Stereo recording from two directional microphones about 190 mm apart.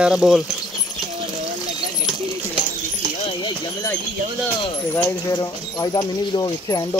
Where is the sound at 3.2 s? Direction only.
25° left (ahead or behind).